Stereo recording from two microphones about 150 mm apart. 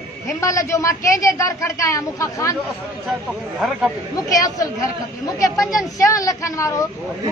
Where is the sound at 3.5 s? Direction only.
10° right (ahead or behind).